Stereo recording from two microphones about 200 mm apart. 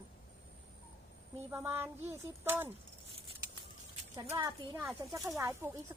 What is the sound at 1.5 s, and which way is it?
Speech, 10° right (ahead or behind).